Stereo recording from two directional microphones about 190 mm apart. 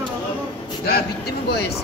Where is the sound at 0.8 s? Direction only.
55° left (ahead or behind).